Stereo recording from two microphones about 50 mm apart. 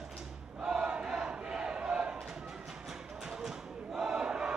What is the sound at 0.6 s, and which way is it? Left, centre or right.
Battle cry, centre.